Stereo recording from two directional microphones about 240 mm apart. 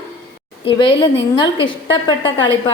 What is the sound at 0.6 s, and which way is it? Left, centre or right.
A woman's voice, left.